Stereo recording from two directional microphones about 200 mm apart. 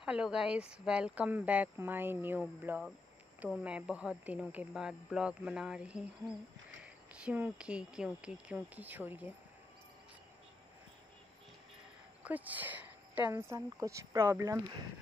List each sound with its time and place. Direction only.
0.0 s speech: 5° right (ahead or behind)
12.2 s a sound: 10° right (ahead or behind)
13.3 s speech: 15° right (ahead or behind)